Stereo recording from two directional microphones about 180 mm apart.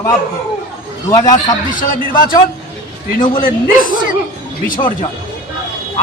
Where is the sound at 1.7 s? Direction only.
50° left (ahead or behind).